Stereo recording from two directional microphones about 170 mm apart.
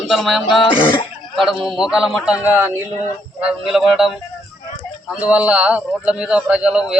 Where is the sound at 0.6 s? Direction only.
30° left (ahead or behind).